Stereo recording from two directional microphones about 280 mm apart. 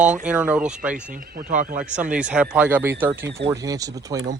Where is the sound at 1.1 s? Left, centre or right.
Right.